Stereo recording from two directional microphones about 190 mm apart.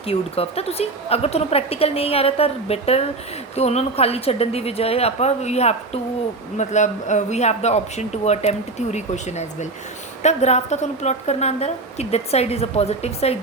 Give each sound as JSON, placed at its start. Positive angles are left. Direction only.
{"t": 0.0, "sound": "speech", "side_deg": 30}